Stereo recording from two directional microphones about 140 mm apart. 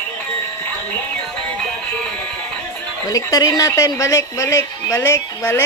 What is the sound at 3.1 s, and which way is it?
Speech, 25° left (ahead or behind).